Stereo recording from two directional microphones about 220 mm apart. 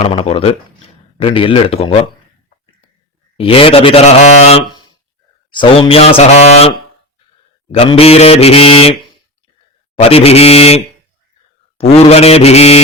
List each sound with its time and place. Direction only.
0.0 s a man's voice: 25° left (ahead or behind)
3.3 s a man's voice: 25° left (ahead or behind)